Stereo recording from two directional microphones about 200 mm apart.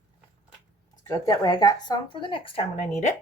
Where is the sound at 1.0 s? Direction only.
20° left (ahead or behind); by 3.1 s 35° left (ahead or behind).